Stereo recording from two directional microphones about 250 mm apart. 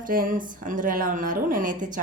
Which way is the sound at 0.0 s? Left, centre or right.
Right.